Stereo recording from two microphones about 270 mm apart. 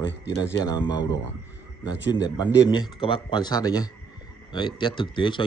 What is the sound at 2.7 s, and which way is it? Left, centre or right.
A man's voice, centre.